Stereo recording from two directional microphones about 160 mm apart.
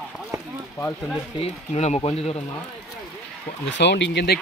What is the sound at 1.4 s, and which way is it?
Speech, 45° left (ahead or behind).